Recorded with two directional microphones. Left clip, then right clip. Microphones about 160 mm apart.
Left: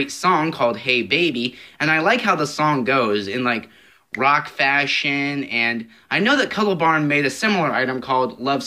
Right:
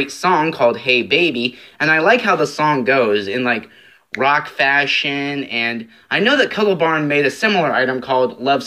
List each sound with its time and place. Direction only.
0.0 s speech: 40° left (ahead or behind)